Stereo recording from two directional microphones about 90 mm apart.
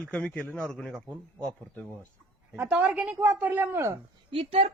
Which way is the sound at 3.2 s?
20° right (ahead or behind).